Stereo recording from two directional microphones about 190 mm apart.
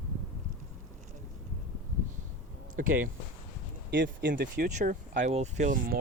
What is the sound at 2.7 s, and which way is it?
Speech, 45° right (ahead or behind).